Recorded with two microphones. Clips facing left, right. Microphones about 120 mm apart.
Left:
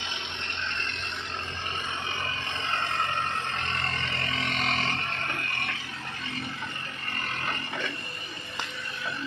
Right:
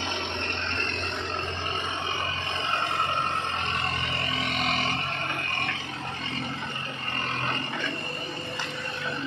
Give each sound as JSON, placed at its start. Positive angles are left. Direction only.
{"t": 4.4, "sound": "music", "side_deg": -5}